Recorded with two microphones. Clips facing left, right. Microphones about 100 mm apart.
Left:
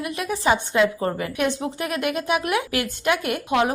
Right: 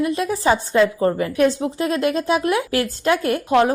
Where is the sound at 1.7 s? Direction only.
30° right (ahead or behind).